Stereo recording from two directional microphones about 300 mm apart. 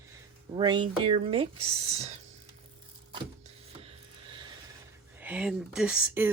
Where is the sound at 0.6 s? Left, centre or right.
Centre.